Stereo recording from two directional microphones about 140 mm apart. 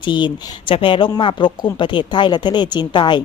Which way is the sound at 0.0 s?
35° left (ahead or behind).